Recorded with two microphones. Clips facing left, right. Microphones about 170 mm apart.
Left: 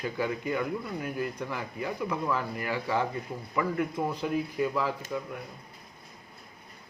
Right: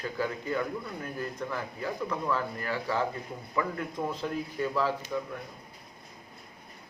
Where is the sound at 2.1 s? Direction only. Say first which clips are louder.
Even; 10° left (ahead or behind).